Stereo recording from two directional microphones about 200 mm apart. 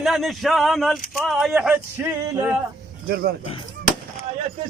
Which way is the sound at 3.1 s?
50° right (ahead or behind).